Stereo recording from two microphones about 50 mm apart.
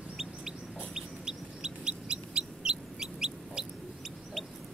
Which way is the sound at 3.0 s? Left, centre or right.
Centre.